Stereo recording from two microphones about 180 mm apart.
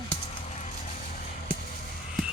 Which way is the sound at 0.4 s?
40° left (ahead or behind).